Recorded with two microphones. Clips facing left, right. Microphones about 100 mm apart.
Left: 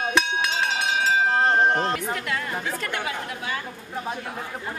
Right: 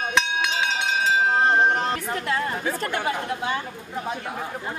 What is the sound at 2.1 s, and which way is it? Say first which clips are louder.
Speech: right 3 dB; 35° right (ahead or behind).